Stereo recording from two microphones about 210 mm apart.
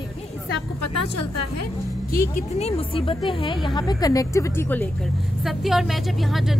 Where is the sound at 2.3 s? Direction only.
30° left (ahead or behind); by 6.6 s centre (ahead or behind).